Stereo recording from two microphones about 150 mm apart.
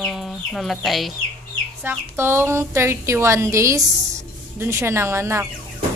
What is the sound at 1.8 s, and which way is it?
A woman's voice, 15° right (ahead or behind).